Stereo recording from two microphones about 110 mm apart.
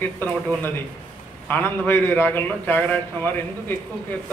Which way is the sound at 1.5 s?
20° left (ahead or behind).